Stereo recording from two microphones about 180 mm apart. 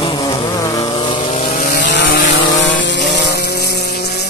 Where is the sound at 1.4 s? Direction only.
45° left (ahead or behind).